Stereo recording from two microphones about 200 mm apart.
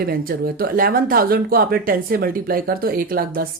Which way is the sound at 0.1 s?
50° right (ahead or behind).